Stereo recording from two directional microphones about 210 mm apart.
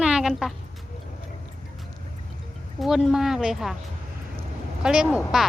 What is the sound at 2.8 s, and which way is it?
Speech, centre (ahead or behind).